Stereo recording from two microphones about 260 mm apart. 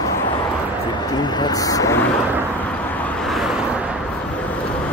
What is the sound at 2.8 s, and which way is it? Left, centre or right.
Vehicle, centre.